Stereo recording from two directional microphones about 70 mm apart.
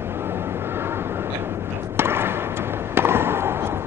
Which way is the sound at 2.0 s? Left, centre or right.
Right.